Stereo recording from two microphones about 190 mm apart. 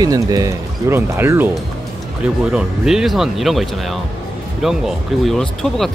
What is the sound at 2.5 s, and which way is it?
Speech, 5° right (ahead or behind).